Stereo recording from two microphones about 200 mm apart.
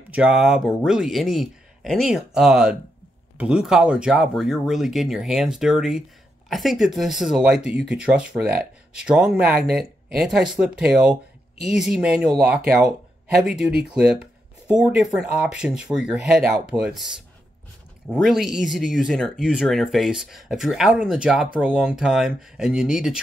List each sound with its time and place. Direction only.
0.1 s speech: 5° right (ahead or behind)